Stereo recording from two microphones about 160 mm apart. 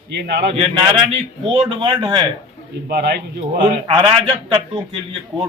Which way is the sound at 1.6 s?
30° right (ahead or behind).